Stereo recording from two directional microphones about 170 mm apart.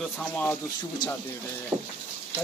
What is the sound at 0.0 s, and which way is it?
Speech, 5° left (ahead or behind).